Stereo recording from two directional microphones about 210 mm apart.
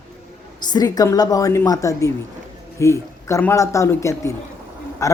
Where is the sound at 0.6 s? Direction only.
20° left (ahead or behind).